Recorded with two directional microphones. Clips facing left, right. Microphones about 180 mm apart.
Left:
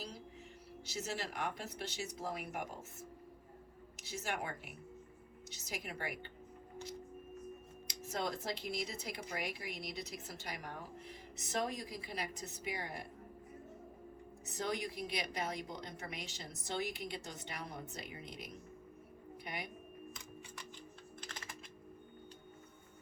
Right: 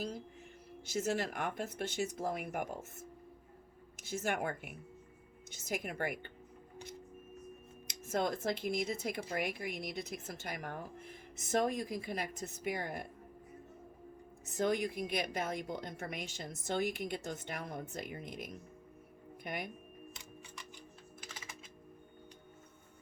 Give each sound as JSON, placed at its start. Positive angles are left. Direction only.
{"t": 0.9, "sound": "a woman's voice", "side_deg": -50}
{"t": 3.9, "sound": "a woman's voice", "side_deg": -50}
{"t": 7.9, "sound": "a woman's voice", "side_deg": -50}
{"t": 14.4, "sound": "a woman's voice", "side_deg": -50}
{"t": 21.2, "sound": "typing", "side_deg": -5}